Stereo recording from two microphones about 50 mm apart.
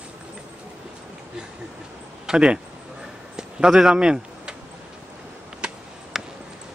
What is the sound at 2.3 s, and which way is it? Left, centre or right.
Speech, centre.